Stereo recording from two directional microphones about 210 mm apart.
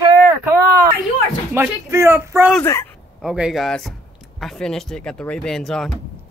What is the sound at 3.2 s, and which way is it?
Speech, 5° right (ahead or behind).